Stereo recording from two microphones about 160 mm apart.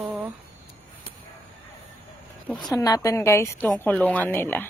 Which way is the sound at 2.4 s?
5° left (ahead or behind).